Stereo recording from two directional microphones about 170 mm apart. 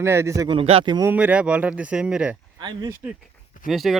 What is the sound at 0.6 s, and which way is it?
Speech, 35° right (ahead or behind).